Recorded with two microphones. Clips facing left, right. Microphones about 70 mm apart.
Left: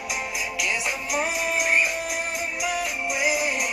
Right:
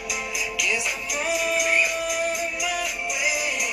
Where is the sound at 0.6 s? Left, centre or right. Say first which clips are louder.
Even; left.